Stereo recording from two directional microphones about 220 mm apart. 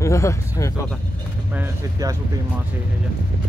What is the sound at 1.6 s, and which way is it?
Speech, 15° right (ahead or behind).